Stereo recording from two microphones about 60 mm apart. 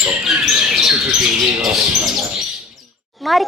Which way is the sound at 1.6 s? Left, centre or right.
Centre.